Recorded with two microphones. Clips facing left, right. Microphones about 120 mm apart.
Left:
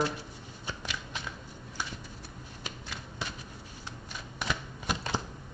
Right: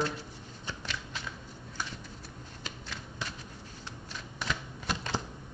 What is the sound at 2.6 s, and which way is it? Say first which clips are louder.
Shuffling cards: left 1 dB; 10° left (ahead or behind).